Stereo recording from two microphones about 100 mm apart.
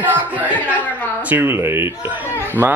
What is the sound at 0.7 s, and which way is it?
Chuckle, 15° left (ahead or behind).